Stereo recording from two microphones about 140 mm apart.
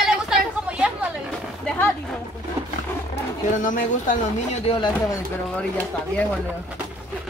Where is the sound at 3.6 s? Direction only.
65° left (ahead or behind).